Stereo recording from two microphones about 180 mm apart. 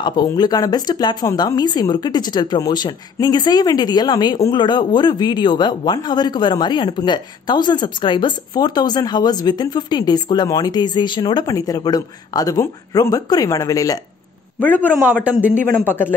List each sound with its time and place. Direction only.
0.0 s speech: 25° left (ahead or behind)
14.8 s speech: 10° right (ahead or behind)
15.8 s a man's voice: 10° left (ahead or behind)